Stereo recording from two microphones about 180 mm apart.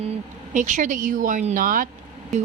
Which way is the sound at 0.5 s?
45° right (ahead or behind).